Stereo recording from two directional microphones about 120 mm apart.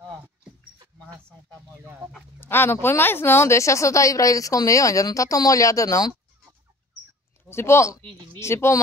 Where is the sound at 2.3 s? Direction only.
20° left (ahead or behind).